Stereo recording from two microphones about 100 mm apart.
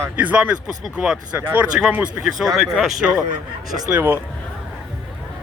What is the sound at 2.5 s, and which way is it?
Speech, centre (ahead or behind).